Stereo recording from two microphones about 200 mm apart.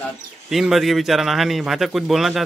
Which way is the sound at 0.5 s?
Centre (ahead or behind).